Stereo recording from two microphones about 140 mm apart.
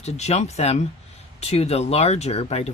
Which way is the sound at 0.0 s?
50° left (ahead or behind).